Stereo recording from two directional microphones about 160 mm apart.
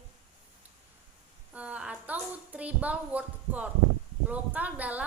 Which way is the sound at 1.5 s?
10° right (ahead or behind).